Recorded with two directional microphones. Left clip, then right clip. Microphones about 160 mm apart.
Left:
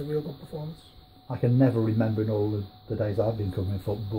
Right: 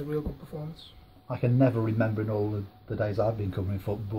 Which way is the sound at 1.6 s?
30° left (ahead or behind).